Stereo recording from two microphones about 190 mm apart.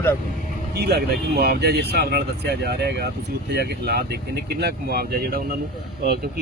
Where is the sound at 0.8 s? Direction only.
55° right (ahead or behind).